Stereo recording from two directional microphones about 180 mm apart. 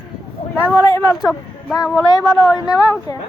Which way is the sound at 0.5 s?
10° left (ahead or behind).